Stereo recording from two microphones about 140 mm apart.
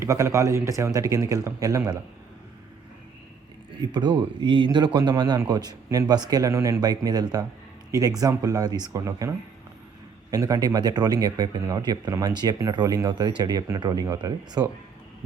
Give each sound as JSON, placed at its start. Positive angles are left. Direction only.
{"t": 0.0, "sound": "speech", "side_deg": -20}
{"t": 3.8, "sound": "speech", "side_deg": -30}
{"t": 10.3, "sound": "speech", "side_deg": -25}